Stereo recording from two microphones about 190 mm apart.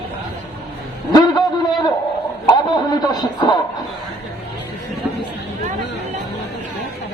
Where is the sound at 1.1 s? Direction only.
20° left (ahead or behind).